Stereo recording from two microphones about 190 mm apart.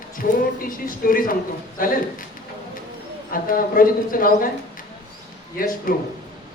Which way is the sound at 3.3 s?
50° left (ahead or behind).